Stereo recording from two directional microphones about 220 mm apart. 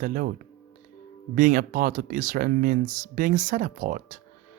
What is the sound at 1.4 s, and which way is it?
Speech, 35° right (ahead or behind).